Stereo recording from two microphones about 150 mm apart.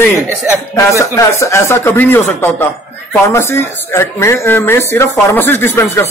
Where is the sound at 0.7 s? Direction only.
20° left (ahead or behind).